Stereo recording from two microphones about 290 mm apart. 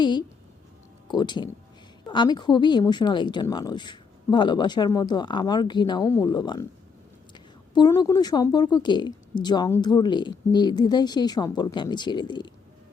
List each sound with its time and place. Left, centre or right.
0.0 s a woman's voice: centre